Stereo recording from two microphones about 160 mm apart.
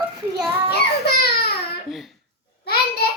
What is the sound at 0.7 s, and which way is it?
Speech, 90° left.